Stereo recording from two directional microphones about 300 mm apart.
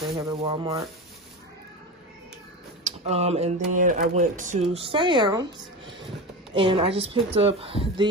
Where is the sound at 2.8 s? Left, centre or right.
Right.